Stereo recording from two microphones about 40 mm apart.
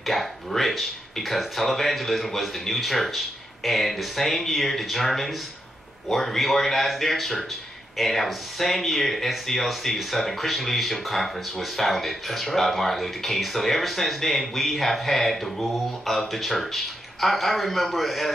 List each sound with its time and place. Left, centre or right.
0.0 s speech: centre